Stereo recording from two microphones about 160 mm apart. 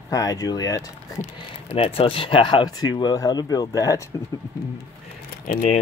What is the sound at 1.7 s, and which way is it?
Speech, 35° left (ahead or behind).